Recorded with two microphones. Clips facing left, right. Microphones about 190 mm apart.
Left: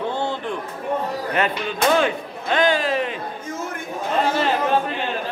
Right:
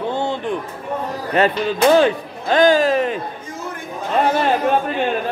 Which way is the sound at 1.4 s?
35° right (ahead or behind).